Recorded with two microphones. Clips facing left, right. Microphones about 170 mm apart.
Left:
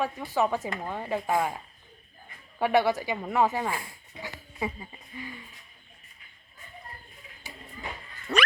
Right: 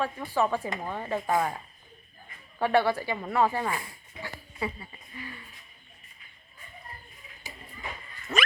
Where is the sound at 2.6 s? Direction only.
15° left (ahead or behind).